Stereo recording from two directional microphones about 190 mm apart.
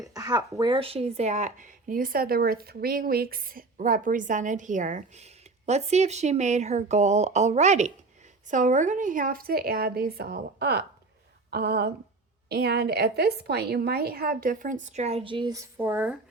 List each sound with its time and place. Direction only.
0.0 s a woman's voice: 20° right (ahead or behind)
15.8 s speech: 10° right (ahead or behind)